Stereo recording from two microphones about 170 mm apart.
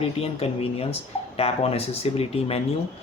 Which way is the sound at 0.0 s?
35° left (ahead or behind).